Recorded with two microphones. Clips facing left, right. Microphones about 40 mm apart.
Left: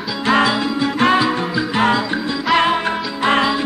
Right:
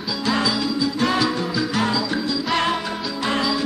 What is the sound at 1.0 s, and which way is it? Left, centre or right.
Music, left.